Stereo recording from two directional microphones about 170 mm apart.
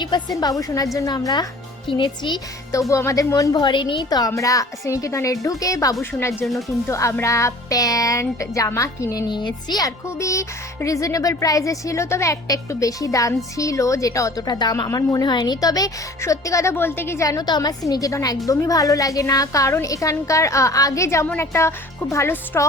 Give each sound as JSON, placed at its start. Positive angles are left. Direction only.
{"t": 0.0, "sound": "speech", "side_deg": 25}
{"t": 6.4, "sound": "speech", "side_deg": 0}
{"t": 6.8, "sound": "speech", "side_deg": 15}